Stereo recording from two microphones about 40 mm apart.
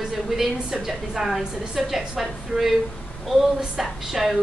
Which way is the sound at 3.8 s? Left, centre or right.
Centre.